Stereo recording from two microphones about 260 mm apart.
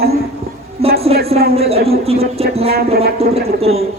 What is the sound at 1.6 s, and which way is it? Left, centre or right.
Speech, right.